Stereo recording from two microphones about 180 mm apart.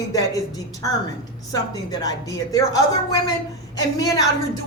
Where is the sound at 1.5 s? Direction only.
20° left (ahead or behind).